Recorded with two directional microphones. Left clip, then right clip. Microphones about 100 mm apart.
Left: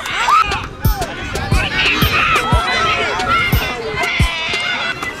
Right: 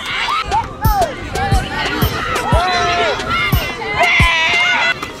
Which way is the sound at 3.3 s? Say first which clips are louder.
Left 2 dB; 5° right (ahead or behind).